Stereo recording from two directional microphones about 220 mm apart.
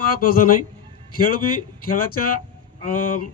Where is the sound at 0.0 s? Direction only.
40° left (ahead or behind).